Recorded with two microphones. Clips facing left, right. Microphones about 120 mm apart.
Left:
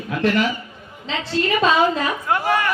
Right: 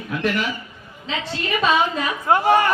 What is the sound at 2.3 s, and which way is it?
Speech, 30° right (ahead or behind).